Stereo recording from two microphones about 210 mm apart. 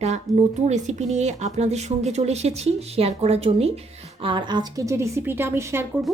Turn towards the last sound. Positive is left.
turn(degrees=-10)  # may be behind; listen again after turning